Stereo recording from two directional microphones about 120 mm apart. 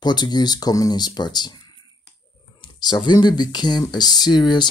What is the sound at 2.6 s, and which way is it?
Speech, 40° left (ahead or behind).